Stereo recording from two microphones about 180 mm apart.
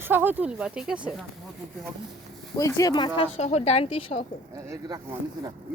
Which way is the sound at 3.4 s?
35° left (ahead or behind).